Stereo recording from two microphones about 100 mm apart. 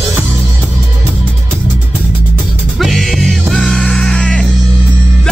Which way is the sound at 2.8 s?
Centre (ahead or behind).